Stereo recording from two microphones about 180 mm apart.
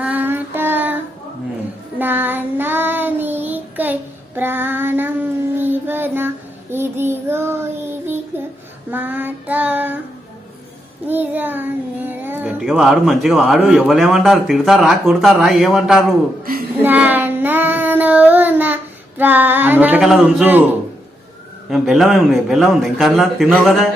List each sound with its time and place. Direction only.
0.0 s child singing: 10° right (ahead or behind)
2.0 s child singing: 10° right (ahead or behind)
11.0 s a child's voice: 10° right (ahead or behind)
16.4 s a sound: 55° right (ahead or behind)
16.8 s child singing: 10° right (ahead or behind)
21.7 s a man's voice: centre (ahead or behind)